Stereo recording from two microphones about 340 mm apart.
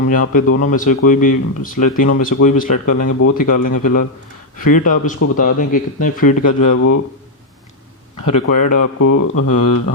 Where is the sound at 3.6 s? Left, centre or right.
Left.